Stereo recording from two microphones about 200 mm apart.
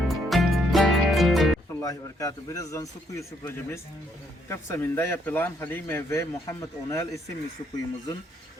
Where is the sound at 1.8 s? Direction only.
15° left (ahead or behind).